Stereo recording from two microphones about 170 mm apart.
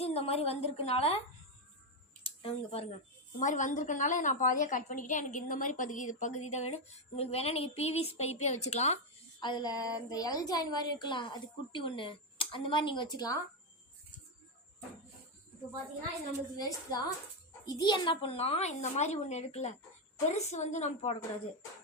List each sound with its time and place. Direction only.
0.0 s a woman's voice: 35° left (ahead or behind)
2.2 s speech: 35° left (ahead or behind)
3.3 s a woman's voice: 45° left (ahead or behind)
9.4 s a woman's voice: 25° left (ahead or behind)
16.6 s a woman's voice: 20° left (ahead or behind); by 21.2 s 40° left (ahead or behind)